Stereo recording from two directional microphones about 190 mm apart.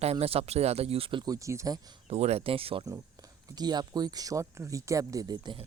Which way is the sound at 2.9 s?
15° right (ahead or behind).